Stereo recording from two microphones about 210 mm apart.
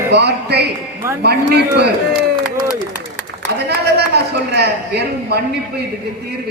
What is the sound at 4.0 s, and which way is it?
A man's voice, 50° right (ahead or behind).